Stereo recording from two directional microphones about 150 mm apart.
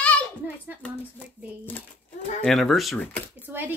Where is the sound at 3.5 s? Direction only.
15° right (ahead or behind).